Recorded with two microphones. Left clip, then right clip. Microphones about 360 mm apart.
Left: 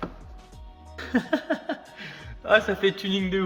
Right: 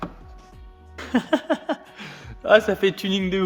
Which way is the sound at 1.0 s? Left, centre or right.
Centre.